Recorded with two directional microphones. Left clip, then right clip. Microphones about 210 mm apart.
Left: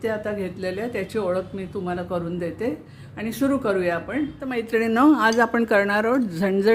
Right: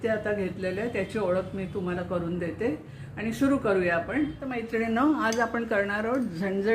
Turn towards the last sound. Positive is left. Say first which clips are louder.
# left 7 dB
turn(degrees=55)  # may be behind; listen again after turning